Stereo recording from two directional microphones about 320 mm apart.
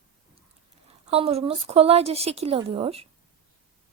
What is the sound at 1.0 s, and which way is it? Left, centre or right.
A woman's voice, centre.